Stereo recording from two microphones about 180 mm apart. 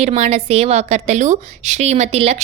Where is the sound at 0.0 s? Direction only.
35° right (ahead or behind).